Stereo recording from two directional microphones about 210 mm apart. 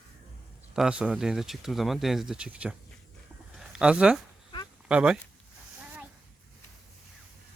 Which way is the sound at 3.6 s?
5° right (ahead or behind).